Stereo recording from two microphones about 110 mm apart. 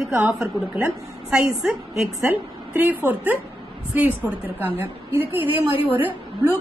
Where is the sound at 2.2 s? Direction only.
15° right (ahead or behind).